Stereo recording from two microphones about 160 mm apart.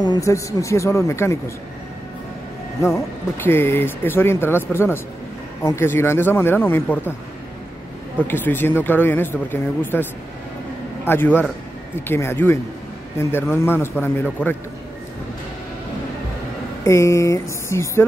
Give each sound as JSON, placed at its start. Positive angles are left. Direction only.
{"t": 0.0, "sound": "speech", "side_deg": 25}
{"t": 3.4, "sound": "speech", "side_deg": 15}
{"t": 8.2, "sound": "speech", "side_deg": 10}
{"t": 11.1, "sound": "speech", "side_deg": 15}
{"t": 16.8, "sound": "speech", "side_deg": 20}